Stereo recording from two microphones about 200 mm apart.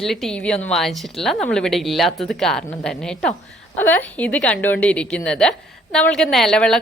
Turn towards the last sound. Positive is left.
turn(degrees=5)  # may be behind; listen again after turning